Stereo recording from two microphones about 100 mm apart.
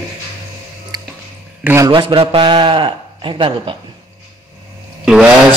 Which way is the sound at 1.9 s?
55° right (ahead or behind).